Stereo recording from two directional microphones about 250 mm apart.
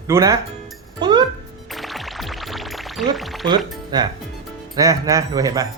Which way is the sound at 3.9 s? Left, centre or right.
Centre.